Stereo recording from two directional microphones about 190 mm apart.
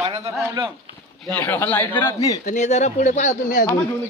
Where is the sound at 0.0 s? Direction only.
30° right (ahead or behind).